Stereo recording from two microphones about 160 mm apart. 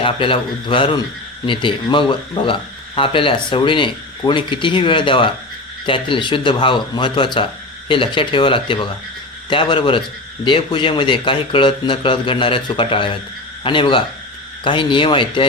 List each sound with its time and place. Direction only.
0.0 s speech: 35° left (ahead or behind)